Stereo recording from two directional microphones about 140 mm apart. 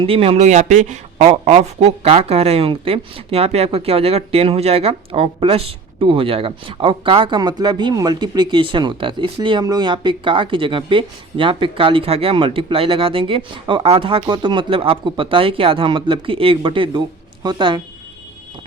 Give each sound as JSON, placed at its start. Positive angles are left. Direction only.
{"t": 0.0, "sound": "speech", "side_deg": -40}
{"t": 0.3, "sound": "speech", "side_deg": -60}
{"t": 1.3, "sound": "speech", "side_deg": -50}